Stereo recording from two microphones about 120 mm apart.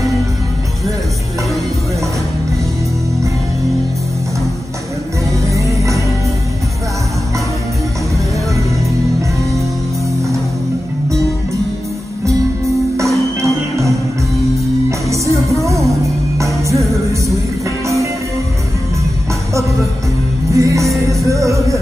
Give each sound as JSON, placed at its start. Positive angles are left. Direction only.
{"t": 5.5, "sound": "music", "side_deg": -25}
{"t": 13.4, "sound": "music", "side_deg": -25}
{"t": 17.8, "sound": "music", "side_deg": -25}
{"t": 20.5, "sound": "music", "side_deg": -25}